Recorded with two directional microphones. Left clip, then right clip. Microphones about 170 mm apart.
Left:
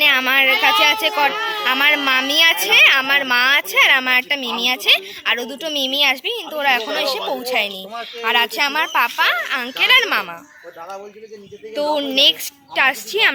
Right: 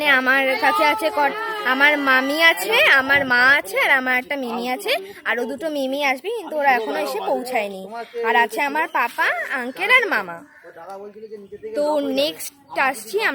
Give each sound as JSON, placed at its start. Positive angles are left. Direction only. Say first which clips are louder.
{"t": 0.0, "sound": "a sound", "louder": "left 3 dB", "side_deg": -35}
{"t": 0.6, "sound": "speech", "louder": "left 3 dB", "side_deg": -30}
{"t": 1.3, "sound": "speech", "louder": "left 4 dB", "side_deg": 0}
{"t": 1.6, "sound": "a woman's voice", "louder": "even", "side_deg": -35}
{"t": 11.9, "sound": "a woman's voice", "louder": "left 6 dB", "side_deg": -10}